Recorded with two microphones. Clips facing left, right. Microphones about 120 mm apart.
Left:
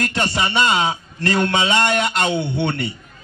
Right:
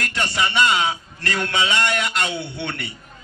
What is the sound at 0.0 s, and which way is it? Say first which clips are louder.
A man's voice: left 3 dB; 30° left (ahead or behind).